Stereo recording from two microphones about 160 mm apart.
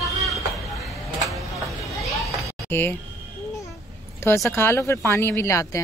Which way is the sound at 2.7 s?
15° left (ahead or behind).